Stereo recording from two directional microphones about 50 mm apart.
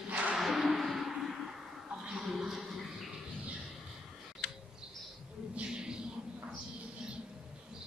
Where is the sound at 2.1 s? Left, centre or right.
Centre.